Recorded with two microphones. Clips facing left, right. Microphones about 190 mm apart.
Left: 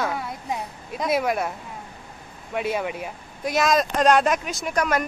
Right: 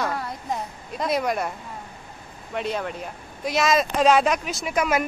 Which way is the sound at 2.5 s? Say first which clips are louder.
Left 2 dB; 5° left (ahead or behind).